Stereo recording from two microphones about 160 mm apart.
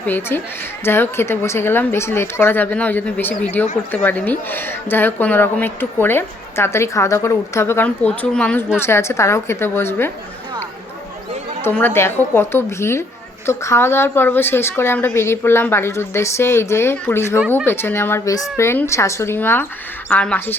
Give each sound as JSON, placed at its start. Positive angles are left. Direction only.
{"t": 0.0, "sound": "a woman's voice", "side_deg": 15}
{"t": 11.6, "sound": "a woman's voice", "side_deg": 15}